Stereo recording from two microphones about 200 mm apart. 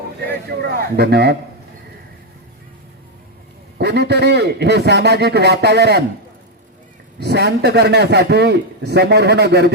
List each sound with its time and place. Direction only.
0.6 s speech: 50° right (ahead or behind)
3.8 s a man's voice: 55° right (ahead or behind)
7.2 s a man's voice: 55° right (ahead or behind)